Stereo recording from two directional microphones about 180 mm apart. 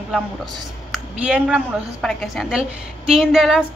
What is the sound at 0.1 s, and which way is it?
A woman's voice, 5° right (ahead or behind).